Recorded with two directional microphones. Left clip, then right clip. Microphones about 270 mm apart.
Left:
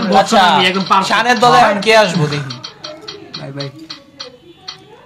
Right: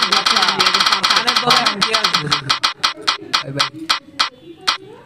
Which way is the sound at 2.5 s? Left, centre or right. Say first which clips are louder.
Right 11 dB; right.